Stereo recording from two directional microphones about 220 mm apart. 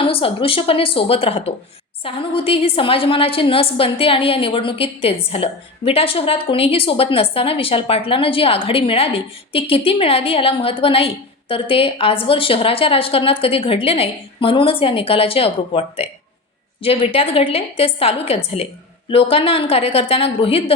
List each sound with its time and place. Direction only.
0.0 s a woman's voice: 25° left (ahead or behind)